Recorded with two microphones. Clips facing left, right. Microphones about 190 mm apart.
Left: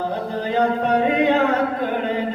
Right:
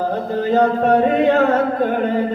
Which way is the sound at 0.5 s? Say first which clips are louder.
Right 4 dB; 45° right (ahead or behind).